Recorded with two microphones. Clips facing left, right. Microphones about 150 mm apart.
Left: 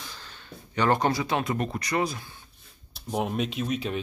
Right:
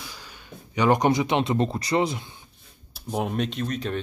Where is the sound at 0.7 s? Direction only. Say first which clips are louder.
Right 3 dB; 15° right (ahead or behind).